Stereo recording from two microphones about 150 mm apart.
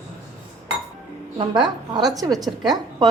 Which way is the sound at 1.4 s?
30° right (ahead or behind).